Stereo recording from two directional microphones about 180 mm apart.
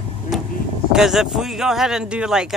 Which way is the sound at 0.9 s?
Centre (ahead or behind).